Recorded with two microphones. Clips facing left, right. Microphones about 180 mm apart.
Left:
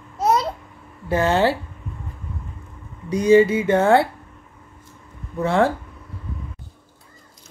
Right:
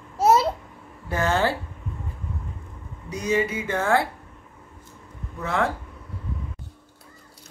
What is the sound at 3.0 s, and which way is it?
Speech, 30° left (ahead or behind).